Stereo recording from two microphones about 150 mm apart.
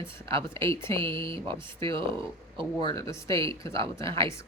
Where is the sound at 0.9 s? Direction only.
35° right (ahead or behind).